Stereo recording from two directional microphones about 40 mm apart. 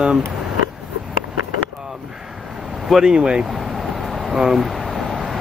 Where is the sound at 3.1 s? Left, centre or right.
Right.